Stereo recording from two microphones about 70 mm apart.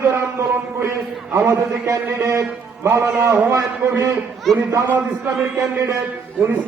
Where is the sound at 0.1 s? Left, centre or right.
Right.